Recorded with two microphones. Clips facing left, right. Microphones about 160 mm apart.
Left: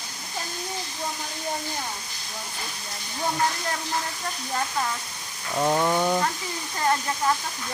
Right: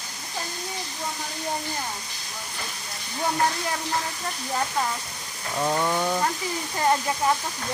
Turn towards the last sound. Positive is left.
turn(degrees=-15)  # may be behind; listen again after turning